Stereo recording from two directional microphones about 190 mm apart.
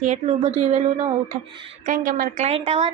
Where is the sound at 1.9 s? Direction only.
45° right (ahead or behind).